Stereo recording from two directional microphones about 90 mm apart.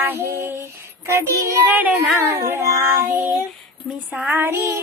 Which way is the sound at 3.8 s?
Centre (ahead or behind).